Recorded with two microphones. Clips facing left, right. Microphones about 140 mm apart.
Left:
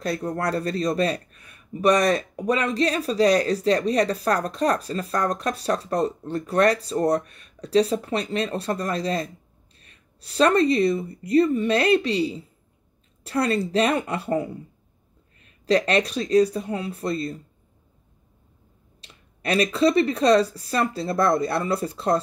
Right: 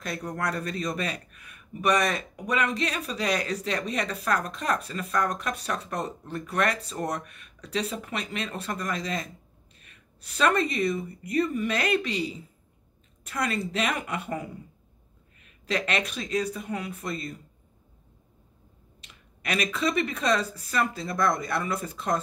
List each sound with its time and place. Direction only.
0.0 s speech: 30° left (ahead or behind)
18.9 s speech: 35° left (ahead or behind)